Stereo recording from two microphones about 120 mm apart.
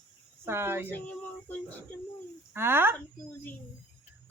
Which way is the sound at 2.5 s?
20° right (ahead or behind).